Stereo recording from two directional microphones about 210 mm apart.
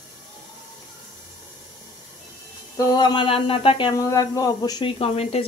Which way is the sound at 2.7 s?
20° left (ahead or behind).